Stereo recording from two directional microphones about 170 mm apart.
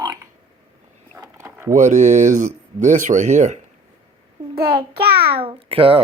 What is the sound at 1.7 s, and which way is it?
Speech, 45° right (ahead or behind).